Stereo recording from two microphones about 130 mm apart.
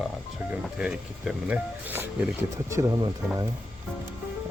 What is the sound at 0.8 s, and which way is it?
Speech, 5° right (ahead or behind).